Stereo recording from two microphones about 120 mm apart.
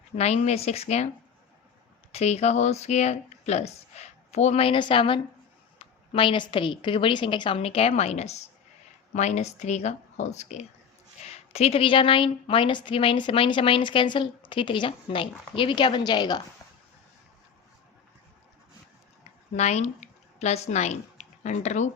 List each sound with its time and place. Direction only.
0.2 s speech: 65° left (ahead or behind)
2.1 s a woman's voice: 65° left (ahead or behind); by 16.4 s 35° left (ahead or behind)
19.5 s speech: 65° left (ahead or behind)